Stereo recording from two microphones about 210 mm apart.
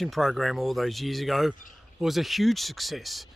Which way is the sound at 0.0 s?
Centre (ahead or behind).